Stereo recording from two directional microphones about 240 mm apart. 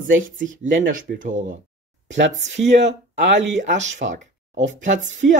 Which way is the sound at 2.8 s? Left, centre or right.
Right.